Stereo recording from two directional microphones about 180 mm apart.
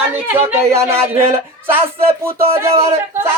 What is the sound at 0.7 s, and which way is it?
Speech, 15° right (ahead or behind).